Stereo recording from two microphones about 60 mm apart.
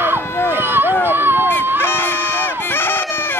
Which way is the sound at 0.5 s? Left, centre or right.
Right.